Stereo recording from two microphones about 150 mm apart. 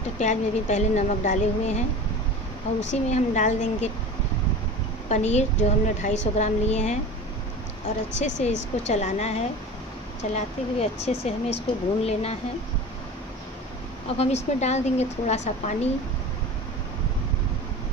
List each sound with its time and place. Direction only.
0.2 s speech: 50° left (ahead or behind)
2.9 s speech: 55° left (ahead or behind)
5.1 s speech: 50° left (ahead or behind)
8.2 s speech: 50° left (ahead or behind)
14.1 s speech: 45° left (ahead or behind)